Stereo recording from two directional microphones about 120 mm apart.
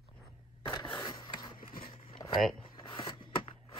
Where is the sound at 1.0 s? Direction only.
35° left (ahead or behind).